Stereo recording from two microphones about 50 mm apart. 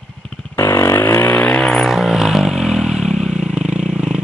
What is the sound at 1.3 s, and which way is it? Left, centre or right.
Vehicle, left.